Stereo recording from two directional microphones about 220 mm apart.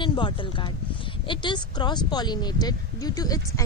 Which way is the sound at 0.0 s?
20° left (ahead or behind).